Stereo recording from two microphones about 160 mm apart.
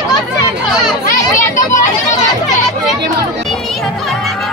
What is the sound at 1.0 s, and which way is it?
Children playing, 50° left (ahead or behind).